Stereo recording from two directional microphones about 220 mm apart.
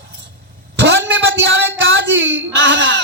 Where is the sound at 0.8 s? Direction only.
50° right (ahead or behind).